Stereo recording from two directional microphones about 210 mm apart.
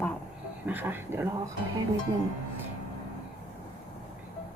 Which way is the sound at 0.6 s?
10° right (ahead or behind).